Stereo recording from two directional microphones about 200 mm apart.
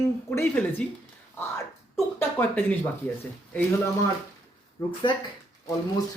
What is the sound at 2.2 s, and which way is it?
Speech, 10° left (ahead or behind).